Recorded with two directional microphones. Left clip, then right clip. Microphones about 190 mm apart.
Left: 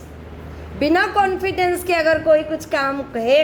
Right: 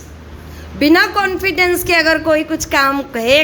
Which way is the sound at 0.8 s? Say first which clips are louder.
Right 4 dB; 25° right (ahead or behind).